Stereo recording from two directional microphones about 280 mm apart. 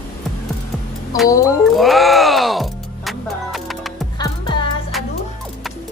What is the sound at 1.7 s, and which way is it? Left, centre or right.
Music, centre.